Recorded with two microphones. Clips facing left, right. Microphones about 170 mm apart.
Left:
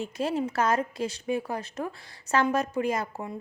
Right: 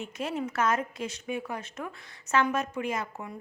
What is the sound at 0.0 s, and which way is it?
Speech, 35° left (ahead or behind).